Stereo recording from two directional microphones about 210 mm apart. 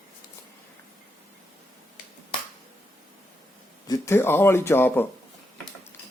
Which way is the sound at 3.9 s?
10° left (ahead or behind).